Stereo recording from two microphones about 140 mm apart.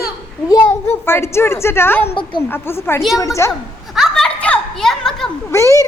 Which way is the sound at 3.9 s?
Centre (ahead or behind).